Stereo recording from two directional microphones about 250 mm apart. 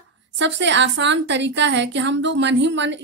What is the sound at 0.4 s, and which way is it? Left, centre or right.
A woman's voice, right.